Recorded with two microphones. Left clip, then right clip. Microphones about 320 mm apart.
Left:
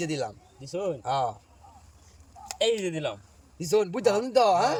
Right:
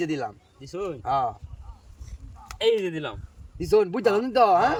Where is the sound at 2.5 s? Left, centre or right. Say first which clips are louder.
Right 3 dB; centre.